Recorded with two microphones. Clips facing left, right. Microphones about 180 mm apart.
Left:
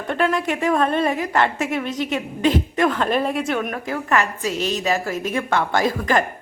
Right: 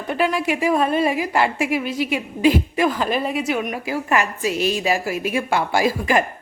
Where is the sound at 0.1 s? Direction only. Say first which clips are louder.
Even; 5° right (ahead or behind).